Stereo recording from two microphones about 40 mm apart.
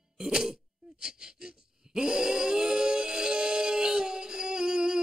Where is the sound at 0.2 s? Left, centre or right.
Centre.